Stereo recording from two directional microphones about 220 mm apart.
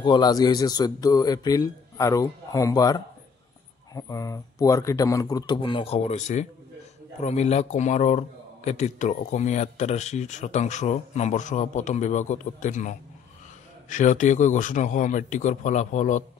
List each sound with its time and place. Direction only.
0.0 s a man's voice: 20° left (ahead or behind)